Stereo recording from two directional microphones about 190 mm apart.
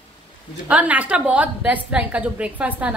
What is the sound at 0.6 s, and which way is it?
A woman's voice, 5° right (ahead or behind).